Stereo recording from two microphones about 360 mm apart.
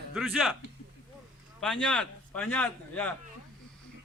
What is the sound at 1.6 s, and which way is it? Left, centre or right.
A man's voice, centre.